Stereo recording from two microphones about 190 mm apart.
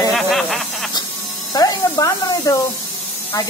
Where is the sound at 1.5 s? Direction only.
20° left (ahead or behind).